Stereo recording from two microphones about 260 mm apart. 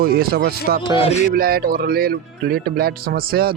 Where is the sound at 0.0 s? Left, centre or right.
Right.